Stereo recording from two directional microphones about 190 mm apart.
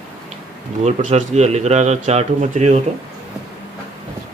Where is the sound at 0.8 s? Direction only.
35° right (ahead or behind).